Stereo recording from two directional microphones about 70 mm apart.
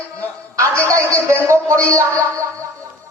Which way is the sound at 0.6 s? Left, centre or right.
Right.